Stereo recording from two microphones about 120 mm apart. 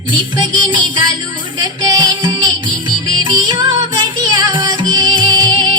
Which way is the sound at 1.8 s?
35° right (ahead or behind).